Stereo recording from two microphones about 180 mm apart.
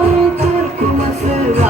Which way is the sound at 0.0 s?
40° right (ahead or behind).